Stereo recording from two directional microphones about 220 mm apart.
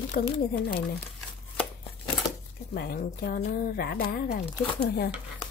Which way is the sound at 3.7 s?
45° left (ahead or behind).